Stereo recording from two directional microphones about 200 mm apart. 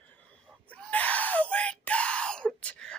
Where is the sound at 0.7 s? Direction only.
5° left (ahead or behind).